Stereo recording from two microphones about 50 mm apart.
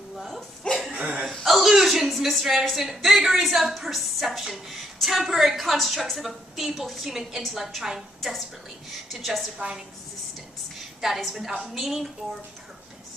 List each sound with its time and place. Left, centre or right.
0.9 s a sound: right
1.4 s a woman's voice: centre
11.0 s a woman's voice: centre